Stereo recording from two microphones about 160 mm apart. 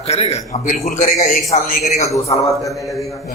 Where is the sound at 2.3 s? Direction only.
20° left (ahead or behind).